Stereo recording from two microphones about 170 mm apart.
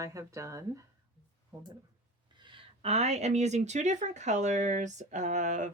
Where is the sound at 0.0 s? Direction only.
20° right (ahead or behind).